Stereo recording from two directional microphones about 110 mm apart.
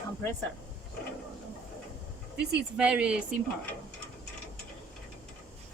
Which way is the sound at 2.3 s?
10° right (ahead or behind).